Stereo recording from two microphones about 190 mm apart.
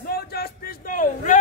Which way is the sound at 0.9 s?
45° left (ahead or behind).